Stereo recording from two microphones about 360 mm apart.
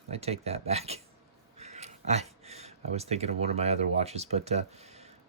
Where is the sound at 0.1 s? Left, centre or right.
Centre.